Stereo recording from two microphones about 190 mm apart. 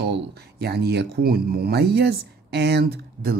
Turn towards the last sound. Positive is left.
turn(degrees=-50)  # may be behind; listen again after turning